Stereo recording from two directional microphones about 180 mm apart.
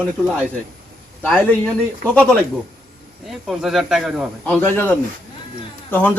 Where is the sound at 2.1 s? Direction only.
5° left (ahead or behind).